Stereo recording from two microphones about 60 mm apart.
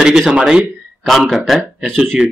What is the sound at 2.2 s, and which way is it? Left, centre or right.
Speech, centre.